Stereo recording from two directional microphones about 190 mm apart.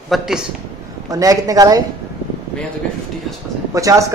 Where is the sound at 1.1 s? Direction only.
20° right (ahead or behind).